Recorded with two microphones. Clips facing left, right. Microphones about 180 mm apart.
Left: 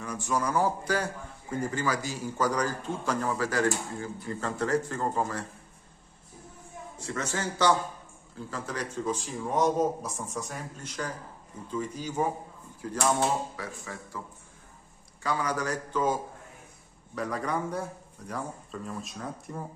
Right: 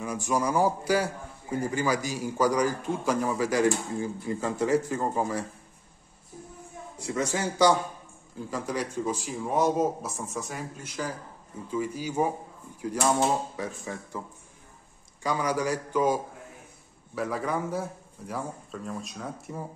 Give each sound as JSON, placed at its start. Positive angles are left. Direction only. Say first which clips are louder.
{"t": 0.0, "sound": "a man's voice", "louder": "right 3 dB", "side_deg": -10}
{"t": 7.0, "sound": "a man's voice", "louder": "right 4 dB", "side_deg": -10}
{"t": 13.2, "sound": "speech", "louder": "right 2 dB", "side_deg": -20}
{"t": 15.2, "sound": "a man's voice", "louder": "right 3 dB", "side_deg": -10}